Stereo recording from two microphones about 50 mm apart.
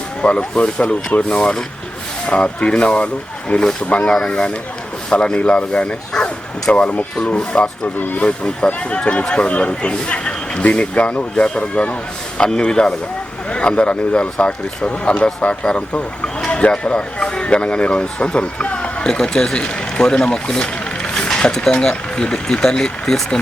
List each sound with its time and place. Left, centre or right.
0.2 s speech: left
2.2 s speech: left
7.9 s speech: left
8.2 s speech: left